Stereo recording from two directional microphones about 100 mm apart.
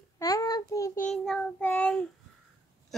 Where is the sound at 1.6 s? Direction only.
20° left (ahead or behind).